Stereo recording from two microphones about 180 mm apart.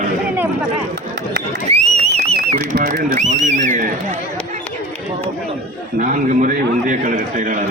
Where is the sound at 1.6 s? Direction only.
35° right (ahead or behind).